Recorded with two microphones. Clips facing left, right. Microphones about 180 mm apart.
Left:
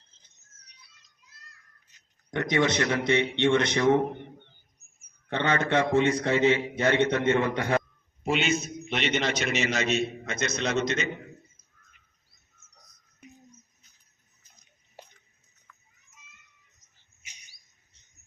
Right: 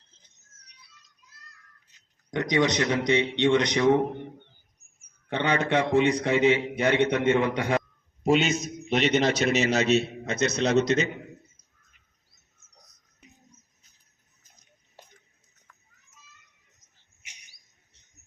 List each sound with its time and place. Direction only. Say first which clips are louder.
2.3 s a man's voice: right 1 dB; 15° right (ahead or behind)
5.3 s a man's voice: right 1 dB; 15° right (ahead or behind)
8.2 s a man's voice: right 4 dB; 40° right (ahead or behind)